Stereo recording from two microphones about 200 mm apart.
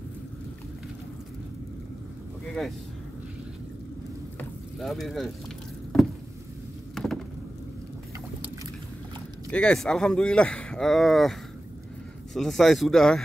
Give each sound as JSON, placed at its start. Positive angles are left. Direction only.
{"t": 2.4, "sound": "speech", "side_deg": 5}
{"t": 4.4, "sound": "sizzle", "side_deg": 0}
{"t": 9.5, "sound": "speech", "side_deg": 5}
{"t": 12.4, "sound": "speech", "side_deg": 0}